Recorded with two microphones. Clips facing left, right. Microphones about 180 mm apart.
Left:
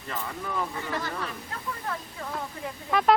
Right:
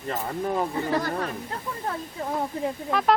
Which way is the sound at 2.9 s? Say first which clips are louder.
Left 2 dB; centre (ahead or behind).